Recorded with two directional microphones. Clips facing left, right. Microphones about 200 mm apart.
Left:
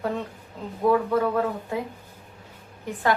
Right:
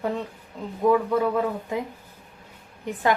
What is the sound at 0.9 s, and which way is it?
Speech, 15° right (ahead or behind).